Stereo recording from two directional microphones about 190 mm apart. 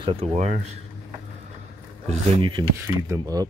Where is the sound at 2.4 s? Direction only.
25° right (ahead or behind).